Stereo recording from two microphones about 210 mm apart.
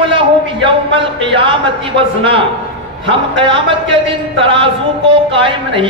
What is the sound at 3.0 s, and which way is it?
A man's voice, 25° right (ahead or behind).